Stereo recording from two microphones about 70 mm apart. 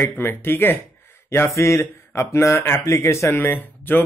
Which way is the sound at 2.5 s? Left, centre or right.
Left.